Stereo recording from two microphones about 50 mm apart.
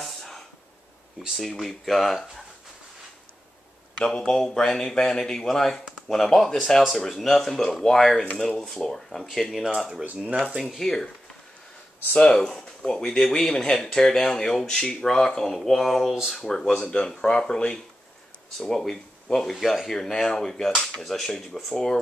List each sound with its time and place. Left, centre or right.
0.0 s a sound: centre
1.3 s speech: centre
4.0 s speech: centre
9.8 s speech: centre
10.0 s speech: right
10.7 s speech: centre
12.2 s speech: centre
12.4 s speech: centre